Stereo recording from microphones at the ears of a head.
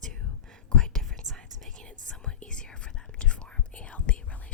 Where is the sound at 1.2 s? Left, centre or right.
Right.